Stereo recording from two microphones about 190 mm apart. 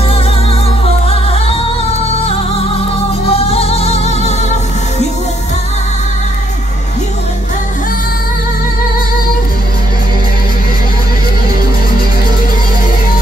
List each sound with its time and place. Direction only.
1.0 s music: 30° left (ahead or behind)